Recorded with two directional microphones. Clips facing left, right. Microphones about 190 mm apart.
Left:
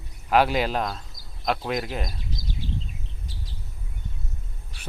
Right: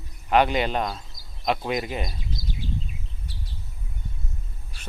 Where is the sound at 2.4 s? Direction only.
45° left (ahead or behind).